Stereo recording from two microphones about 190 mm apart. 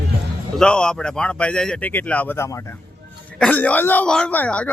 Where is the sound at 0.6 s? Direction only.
5° left (ahead or behind).